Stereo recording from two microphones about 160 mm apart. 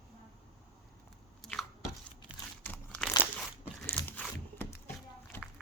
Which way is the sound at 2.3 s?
10° right (ahead or behind).